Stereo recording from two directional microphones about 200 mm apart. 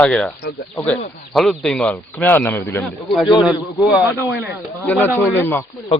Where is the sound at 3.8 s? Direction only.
5° right (ahead or behind).